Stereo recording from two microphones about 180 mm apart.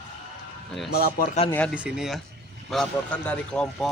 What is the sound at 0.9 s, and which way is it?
Speech, 60° left (ahead or behind).